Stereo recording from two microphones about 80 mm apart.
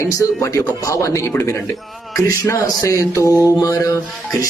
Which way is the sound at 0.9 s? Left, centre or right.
Left.